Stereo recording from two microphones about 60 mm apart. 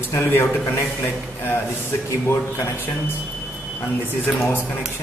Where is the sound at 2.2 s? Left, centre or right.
Left.